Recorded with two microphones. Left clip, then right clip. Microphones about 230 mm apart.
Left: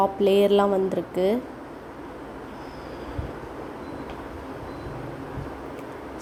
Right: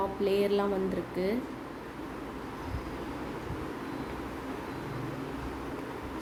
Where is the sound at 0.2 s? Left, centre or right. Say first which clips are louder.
Left 8 dB; left.